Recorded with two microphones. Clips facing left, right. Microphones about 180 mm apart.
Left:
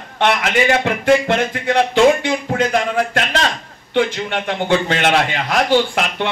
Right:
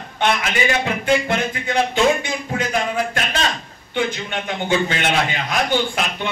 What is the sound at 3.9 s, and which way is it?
A man's voice, 75° left (ahead or behind).